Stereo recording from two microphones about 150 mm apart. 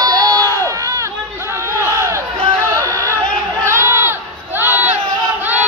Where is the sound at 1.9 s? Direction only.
20° right (ahead or behind).